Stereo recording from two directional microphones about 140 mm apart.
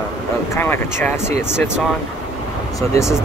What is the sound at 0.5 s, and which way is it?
Speech, 15° left (ahead or behind).